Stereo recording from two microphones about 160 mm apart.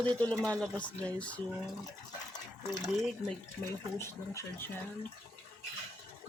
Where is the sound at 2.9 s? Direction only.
Centre (ahead or behind).